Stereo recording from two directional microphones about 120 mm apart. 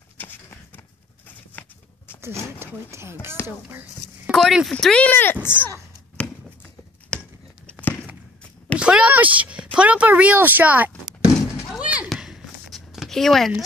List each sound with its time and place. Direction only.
1.5 s horse: 15° left (ahead or behind)
2.6 s speech: 20° right (ahead or behind)
4.3 s speech: centre (ahead or behind); by 5.7 s 15° left (ahead or behind)
7.1 s a sound: 10° left (ahead or behind)
7.8 s walk: 15° left (ahead or behind)
8.7 s a sound: 10° right (ahead or behind)